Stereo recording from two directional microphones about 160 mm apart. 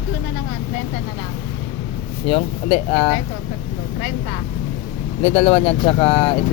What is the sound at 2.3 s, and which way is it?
Speech, 35° left (ahead or behind).